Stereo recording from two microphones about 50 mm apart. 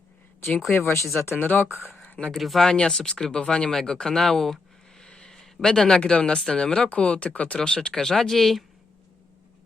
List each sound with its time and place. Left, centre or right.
0.7 s speech: left
1.5 s speech: left
2.1 s speech: centre
2.4 s speech: centre
2.6 s speech: centre
5.0 s a sound: centre
5.6 s speech: centre
7.7 s speech: centre